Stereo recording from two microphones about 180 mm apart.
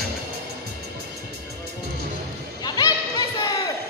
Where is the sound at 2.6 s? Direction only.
20° left (ahead or behind).